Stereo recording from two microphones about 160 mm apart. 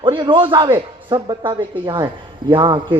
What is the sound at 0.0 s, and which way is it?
A man's voice, 30° right (ahead or behind).